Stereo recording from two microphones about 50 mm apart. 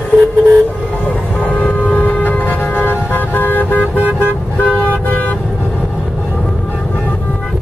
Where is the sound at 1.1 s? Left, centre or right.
Left.